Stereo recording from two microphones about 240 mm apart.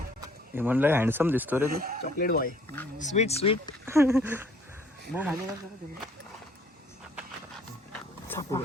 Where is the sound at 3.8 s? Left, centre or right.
Centre.